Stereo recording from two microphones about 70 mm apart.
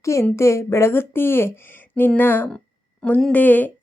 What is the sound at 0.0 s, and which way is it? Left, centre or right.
A woman's voice, left.